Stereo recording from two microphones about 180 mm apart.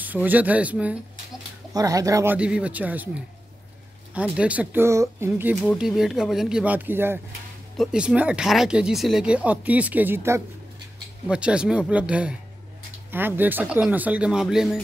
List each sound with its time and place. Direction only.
0.0 s speech: 10° right (ahead or behind)
1.7 s speech: 20° right (ahead or behind)
2.3 s speech: 5° right (ahead or behind)
4.1 s speech: 5° right (ahead or behind)